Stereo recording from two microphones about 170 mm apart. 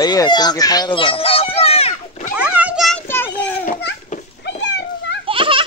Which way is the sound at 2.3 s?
10° right (ahead or behind).